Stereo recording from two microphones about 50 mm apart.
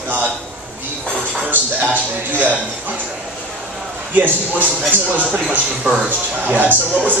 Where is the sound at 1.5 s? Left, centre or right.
Right.